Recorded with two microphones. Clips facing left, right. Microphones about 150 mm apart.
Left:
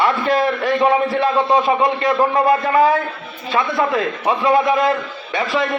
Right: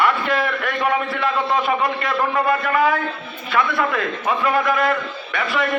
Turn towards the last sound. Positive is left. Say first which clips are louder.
# left 3 dB
turn(degrees=30)  # may be behind; listen again after turning